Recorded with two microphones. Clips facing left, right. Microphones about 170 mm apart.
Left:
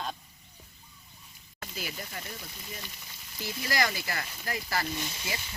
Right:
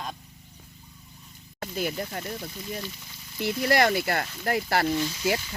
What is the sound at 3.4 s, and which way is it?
Speech, 65° right (ahead or behind).